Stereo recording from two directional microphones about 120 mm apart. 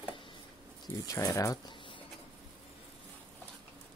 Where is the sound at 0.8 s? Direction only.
30° left (ahead or behind).